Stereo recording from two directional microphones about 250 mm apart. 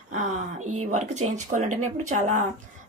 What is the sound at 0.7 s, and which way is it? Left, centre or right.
Speech, right.